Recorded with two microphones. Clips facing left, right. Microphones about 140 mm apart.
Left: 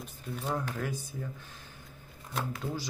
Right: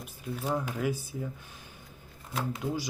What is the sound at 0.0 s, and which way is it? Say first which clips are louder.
Speech: right 2 dB; 5° right (ahead or behind).